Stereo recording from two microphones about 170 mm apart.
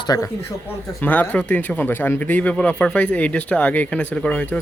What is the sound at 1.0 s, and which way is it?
Speech, 10° left (ahead or behind).